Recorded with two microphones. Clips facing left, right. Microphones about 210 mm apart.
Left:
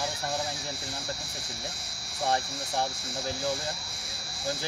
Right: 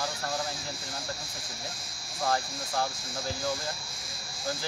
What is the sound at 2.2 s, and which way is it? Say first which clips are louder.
Speech: left 1 dB; 25° left (ahead or behind).